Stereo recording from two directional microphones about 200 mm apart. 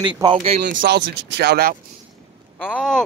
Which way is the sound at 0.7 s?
50° right (ahead or behind).